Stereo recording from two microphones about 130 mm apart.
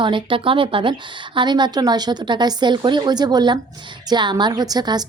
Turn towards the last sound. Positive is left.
turn(degrees=-30)  # may be behind; listen again after turning